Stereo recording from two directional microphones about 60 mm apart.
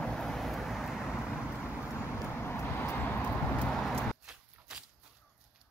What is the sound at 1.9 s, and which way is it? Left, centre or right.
Vehicle, left.